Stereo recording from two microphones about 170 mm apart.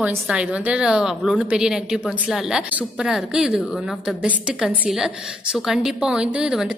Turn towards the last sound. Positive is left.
turn(degrees=-5)  # may be behind; listen again after turning